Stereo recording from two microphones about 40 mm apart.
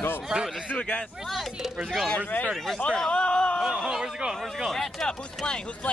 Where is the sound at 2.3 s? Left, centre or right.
Left.